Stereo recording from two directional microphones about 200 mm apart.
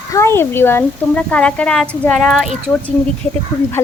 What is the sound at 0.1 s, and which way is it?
A woman's voice, 15° left (ahead or behind).